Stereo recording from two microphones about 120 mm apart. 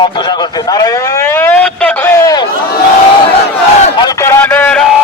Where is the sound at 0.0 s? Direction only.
40° left (ahead or behind); by 2.2 s 15° left (ahead or behind).